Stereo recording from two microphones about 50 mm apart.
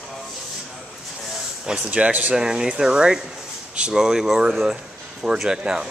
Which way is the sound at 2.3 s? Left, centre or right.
Centre.